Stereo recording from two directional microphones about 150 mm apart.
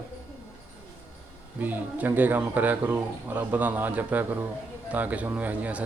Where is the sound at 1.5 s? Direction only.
10° right (ahead or behind).